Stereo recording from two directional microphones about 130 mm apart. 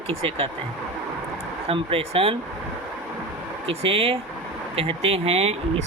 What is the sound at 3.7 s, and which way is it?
Speech, 50° right (ahead or behind).